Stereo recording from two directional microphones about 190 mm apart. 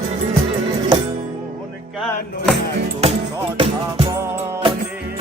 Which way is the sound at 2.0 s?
Centre (ahead or behind).